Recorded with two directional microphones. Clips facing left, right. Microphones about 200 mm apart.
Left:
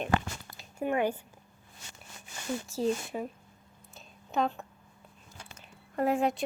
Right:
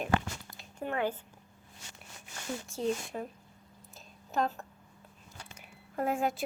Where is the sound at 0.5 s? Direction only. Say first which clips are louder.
Left 5 dB; 10° left (ahead or behind).